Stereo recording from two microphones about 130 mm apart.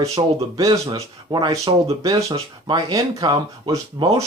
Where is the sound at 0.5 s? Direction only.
30° right (ahead or behind).